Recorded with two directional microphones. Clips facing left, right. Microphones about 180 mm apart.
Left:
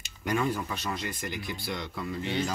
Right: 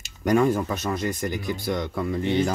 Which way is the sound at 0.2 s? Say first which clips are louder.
Right 9 dB; 45° right (ahead or behind).